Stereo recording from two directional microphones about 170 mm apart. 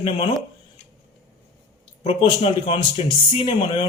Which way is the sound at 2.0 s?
35° left (ahead or behind).